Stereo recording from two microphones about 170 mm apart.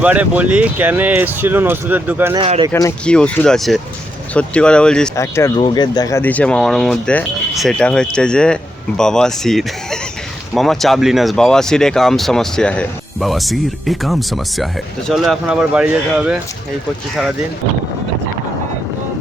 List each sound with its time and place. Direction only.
0.0 s speech: 10° right (ahead or behind)
2.3 s speech: 30° right (ahead or behind)
3.1 s speech: 5° left (ahead or behind)
5.1 s speech: 15° left (ahead or behind)
5.5 s speech: 30° left (ahead or behind); by 16.4 s 5° right (ahead or behind)